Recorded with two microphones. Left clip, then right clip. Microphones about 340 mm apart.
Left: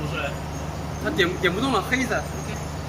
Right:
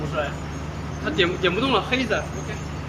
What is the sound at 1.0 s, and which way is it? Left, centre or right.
Speech, centre.